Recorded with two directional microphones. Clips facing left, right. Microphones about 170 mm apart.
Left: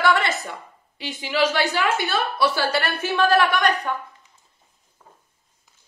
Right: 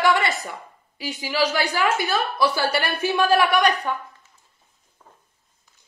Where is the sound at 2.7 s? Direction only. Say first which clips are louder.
Right 1 dB; 10° right (ahead or behind).